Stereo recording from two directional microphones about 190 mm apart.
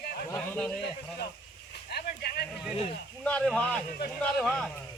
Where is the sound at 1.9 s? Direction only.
55° left (ahead or behind).